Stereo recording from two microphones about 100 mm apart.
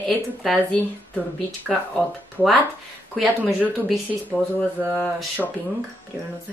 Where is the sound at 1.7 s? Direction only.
Centre (ahead or behind).